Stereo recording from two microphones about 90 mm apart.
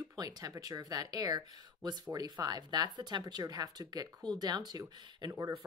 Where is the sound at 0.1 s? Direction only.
45° right (ahead or behind).